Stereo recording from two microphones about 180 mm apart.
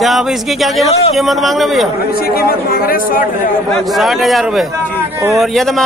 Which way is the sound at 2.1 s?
55° left (ahead or behind).